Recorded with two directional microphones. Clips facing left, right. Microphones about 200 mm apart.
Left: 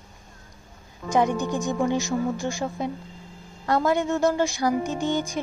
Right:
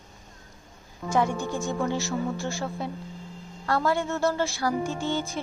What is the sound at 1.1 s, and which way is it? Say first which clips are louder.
Speech: left 3 dB; 20° left (ahead or behind).